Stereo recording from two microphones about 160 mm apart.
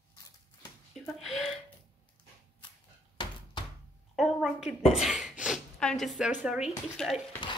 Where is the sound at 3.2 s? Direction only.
30° left (ahead or behind).